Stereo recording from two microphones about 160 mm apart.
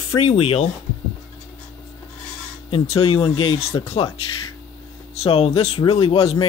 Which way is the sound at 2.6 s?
35° left (ahead or behind).